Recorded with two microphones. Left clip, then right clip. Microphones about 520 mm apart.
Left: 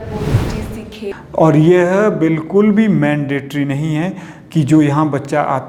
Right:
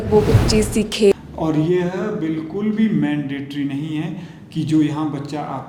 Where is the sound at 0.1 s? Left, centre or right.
Centre.